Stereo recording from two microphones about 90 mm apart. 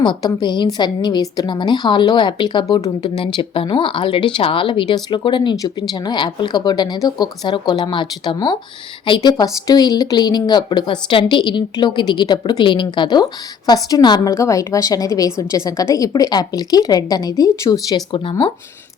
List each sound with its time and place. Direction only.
0.0 s speech: 55° left (ahead or behind)
3.3 s speech: 70° left (ahead or behind)
13.7 s a woman's voice: 45° left (ahead or behind)
14.3 s a woman's voice: 35° left (ahead or behind)